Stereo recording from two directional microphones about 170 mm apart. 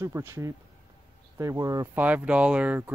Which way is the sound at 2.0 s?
10° right (ahead or behind).